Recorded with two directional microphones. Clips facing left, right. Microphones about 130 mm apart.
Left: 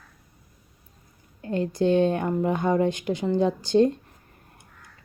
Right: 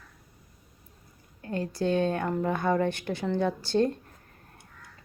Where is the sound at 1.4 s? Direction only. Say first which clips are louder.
Left 5 dB; 20° left (ahead or behind).